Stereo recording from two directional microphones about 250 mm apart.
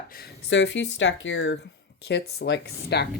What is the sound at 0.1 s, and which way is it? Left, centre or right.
Speech, left.